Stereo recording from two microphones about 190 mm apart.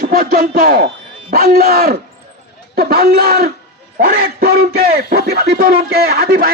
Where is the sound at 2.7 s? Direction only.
55° right (ahead or behind).